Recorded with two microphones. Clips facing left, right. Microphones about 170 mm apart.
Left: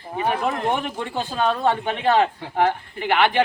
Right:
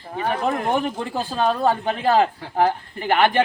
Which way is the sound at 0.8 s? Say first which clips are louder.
Right 3 dB; 35° right (ahead or behind).